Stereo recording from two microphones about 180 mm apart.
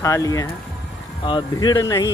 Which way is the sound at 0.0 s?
20° left (ahead or behind).